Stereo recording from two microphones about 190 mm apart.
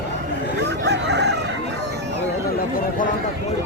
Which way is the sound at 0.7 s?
65° right (ahead or behind).